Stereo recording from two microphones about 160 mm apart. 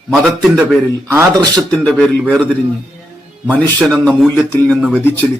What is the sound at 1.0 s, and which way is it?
Speech, 15° right (ahead or behind).